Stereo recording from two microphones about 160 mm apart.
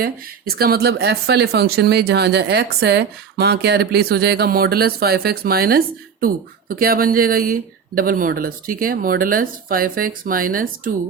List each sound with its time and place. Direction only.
0.0 s speech: 75° right (ahead or behind); by 10.9 s 60° right (ahead or behind)